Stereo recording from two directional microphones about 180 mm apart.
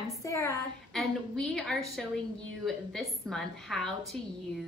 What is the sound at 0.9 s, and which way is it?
A woman's voice, 5° left (ahead or behind).